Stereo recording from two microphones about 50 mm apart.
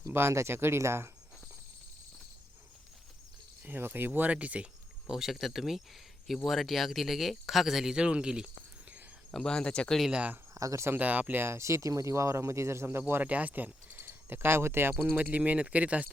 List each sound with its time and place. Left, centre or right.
0.1 s speech: right
3.6 s speech: right
4.3 s speech: right
5.0 s speech: centre
7.9 s speech: centre
9.3 s speech: centre
10.1 s speech: right
10.5 s speech: right
10.9 s speech: right
11.3 s speech: right
13.2 s speech: right
14.0 s speech: right
14.9 s speech: right